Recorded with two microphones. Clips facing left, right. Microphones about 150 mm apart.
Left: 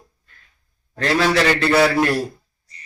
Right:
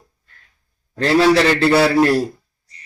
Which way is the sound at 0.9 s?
30° right (ahead or behind).